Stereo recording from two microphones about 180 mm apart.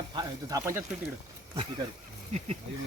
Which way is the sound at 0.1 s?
20° right (ahead or behind).